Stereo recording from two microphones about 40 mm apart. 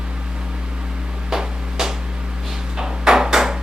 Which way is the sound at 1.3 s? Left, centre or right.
Centre.